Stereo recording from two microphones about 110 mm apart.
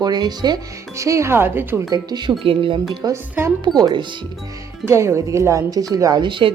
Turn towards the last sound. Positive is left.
turn(degrees=-45)  # may be behind; listen again after turning